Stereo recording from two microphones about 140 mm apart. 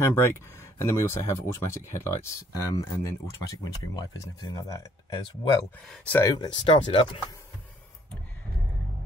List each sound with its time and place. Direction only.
0.0 s speech: 20° left (ahead or behind)
5.9 s speech: 10° left (ahead or behind)
6.2 s speech: 30° left (ahead or behind)